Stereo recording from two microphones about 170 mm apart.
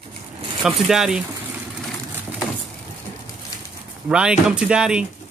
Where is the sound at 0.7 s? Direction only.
Centre (ahead or behind).